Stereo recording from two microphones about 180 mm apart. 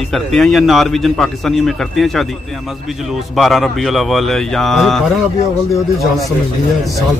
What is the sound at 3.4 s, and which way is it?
Speech, centre (ahead or behind).